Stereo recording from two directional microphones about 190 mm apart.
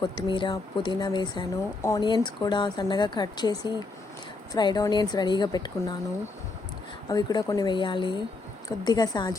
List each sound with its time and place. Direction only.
0.0 s speech: 25° left (ahead or behind)
7.1 s speech: 20° left (ahead or behind)